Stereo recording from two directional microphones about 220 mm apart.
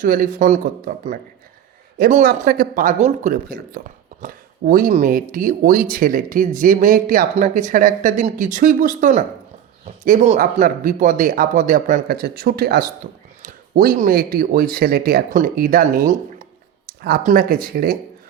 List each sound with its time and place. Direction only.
0.0 s speech: 40° right (ahead or behind)